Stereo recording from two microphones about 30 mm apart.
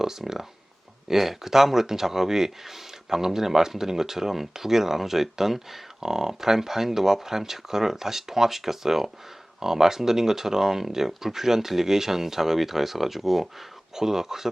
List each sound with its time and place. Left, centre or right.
0.2 s speech: centre